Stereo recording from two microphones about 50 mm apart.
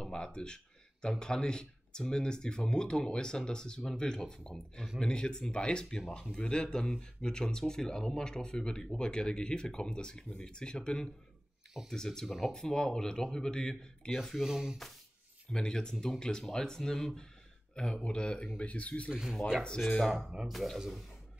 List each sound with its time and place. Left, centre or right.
0.0 s speech: centre
12.3 s speech: centre
12.5 s speech: centre
14.2 s speech: centre
15.5 s speech: centre
19.8 s speech: centre
20.2 s speech: centre
20.5 s speech: centre